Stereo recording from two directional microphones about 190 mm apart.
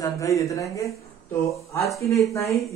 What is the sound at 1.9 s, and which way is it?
Speech, 15° left (ahead or behind).